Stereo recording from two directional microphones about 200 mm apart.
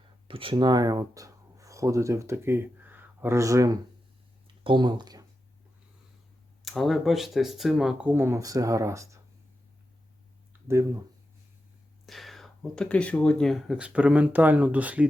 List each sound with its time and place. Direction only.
0.3 s speech: 25° right (ahead or behind)
6.7 s speech: centre (ahead or behind); by 9.2 s 15° right (ahead or behind)
10.7 s speech: 15° right (ahead or behind)
12.0 s speech: centre (ahead or behind)